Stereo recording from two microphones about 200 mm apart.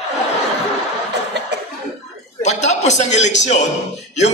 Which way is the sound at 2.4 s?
35° left (ahead or behind).